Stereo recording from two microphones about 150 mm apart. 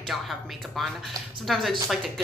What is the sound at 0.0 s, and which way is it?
Speech, centre (ahead or behind).